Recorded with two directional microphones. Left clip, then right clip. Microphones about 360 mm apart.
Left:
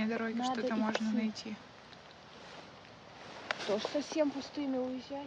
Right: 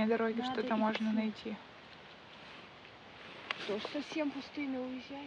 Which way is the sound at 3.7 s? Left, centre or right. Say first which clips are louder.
Left 6 dB; left.